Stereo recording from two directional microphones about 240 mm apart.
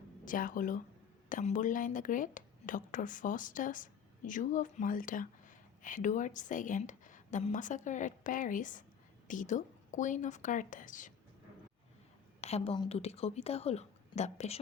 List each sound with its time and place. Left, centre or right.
0.3 s speech: left
12.4 s a woman's voice: left